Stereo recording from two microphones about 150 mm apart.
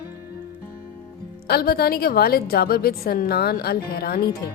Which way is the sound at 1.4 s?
90° left.